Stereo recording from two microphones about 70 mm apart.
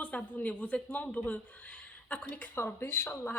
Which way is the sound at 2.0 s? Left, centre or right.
Centre.